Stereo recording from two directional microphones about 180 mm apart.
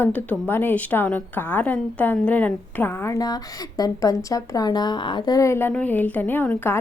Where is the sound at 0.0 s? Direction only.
10° left (ahead or behind).